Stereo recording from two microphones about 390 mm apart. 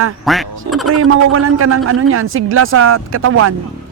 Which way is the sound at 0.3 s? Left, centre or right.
Centre.